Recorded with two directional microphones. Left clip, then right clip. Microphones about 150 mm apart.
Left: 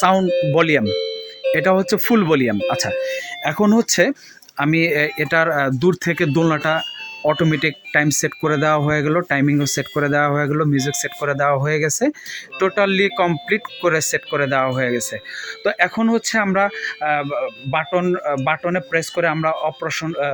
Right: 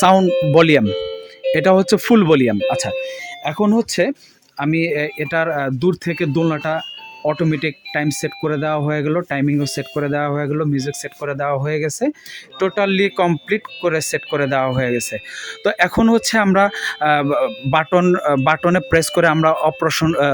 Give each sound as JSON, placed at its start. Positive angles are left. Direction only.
{"t": 0.0, "sound": "speech", "side_deg": -30}
{"t": 2.6, "sound": "speech", "side_deg": -20}
{"t": 12.5, "sound": "speech", "side_deg": -20}
{"t": 15.6, "sound": "speech", "side_deg": -35}